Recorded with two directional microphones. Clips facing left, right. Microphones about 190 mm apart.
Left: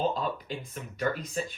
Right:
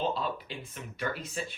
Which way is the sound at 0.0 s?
45° left (ahead or behind).